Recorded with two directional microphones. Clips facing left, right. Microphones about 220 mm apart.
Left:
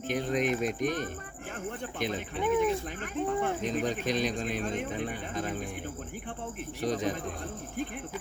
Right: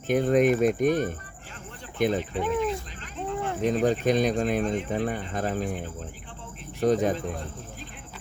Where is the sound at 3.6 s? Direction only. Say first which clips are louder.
Right 7 dB; 55° right (ahead or behind).